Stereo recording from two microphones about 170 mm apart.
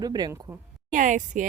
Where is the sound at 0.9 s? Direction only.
50° right (ahead or behind).